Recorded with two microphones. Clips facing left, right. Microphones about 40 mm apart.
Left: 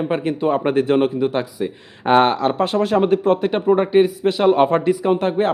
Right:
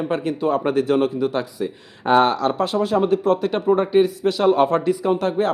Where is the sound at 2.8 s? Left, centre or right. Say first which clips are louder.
Left 2 dB; left.